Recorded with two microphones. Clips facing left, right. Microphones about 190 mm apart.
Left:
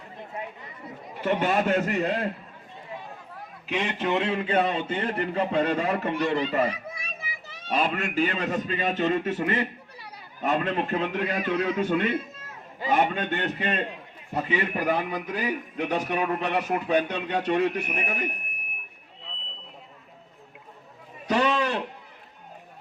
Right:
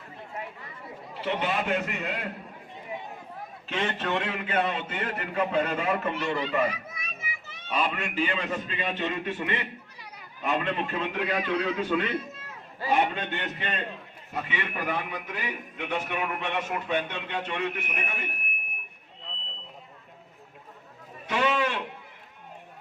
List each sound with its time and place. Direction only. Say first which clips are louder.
1.2 s a man's voice: left 5 dB; 50° left (ahead or behind)
3.7 s a man's voice: left 3 dB; 15° left (ahead or behind)
4.3 s a man's voice: left 4 dB; 30° left (ahead or behind)
21.2 s a sound: left 3 dB; 35° left (ahead or behind)